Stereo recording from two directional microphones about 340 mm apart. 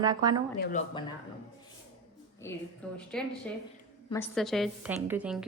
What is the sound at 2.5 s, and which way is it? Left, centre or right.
A woman's voice, centre.